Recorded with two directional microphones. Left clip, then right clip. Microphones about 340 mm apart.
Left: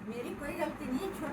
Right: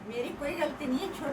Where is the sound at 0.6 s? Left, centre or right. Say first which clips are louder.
Right 3 dB; centre.